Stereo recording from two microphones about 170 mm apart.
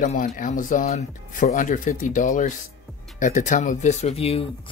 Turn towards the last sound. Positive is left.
turn(degrees=35)  # may be behind; listen again after turning